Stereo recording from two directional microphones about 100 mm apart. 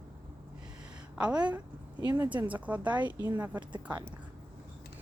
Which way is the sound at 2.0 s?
35° right (ahead or behind).